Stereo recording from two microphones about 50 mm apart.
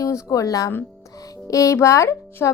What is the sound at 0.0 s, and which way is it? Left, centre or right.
Speech, left.